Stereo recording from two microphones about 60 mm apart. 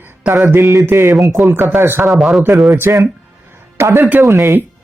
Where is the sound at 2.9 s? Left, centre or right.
Right.